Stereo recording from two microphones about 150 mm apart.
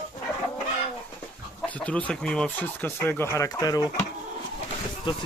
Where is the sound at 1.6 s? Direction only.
10° left (ahead or behind); by 3.8 s 25° left (ahead or behind).